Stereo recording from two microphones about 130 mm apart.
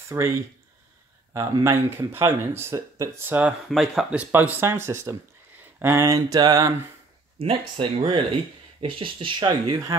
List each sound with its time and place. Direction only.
0.1 s speech: 25° right (ahead or behind)
1.3 s speech: 25° right (ahead or behind)
3.7 s speech: centre (ahead or behind); by 6.0 s 20° right (ahead or behind)
6.0 s speech: 30° right (ahead or behind)
7.3 s speech: 45° right (ahead or behind)